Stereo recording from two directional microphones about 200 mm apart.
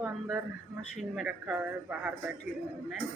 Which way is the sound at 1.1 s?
5° right (ahead or behind).